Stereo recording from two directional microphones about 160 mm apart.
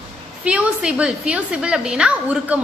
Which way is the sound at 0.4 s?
5° right (ahead or behind).